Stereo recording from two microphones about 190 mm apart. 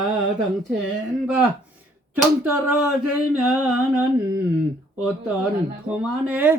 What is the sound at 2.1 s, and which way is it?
Speech, 10° right (ahead or behind).